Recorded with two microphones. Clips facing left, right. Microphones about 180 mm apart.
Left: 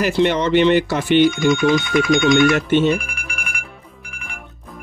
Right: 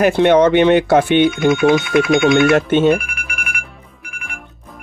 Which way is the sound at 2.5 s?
50° right (ahead or behind).